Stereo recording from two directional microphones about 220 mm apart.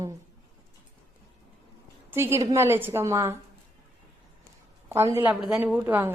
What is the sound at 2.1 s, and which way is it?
A woman's voice, 10° right (ahead or behind).